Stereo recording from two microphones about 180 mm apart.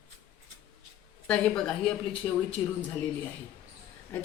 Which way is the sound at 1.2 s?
5° left (ahead or behind).